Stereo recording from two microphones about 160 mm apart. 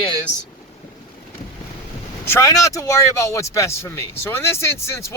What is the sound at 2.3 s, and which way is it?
Speech, 20° left (ahead or behind).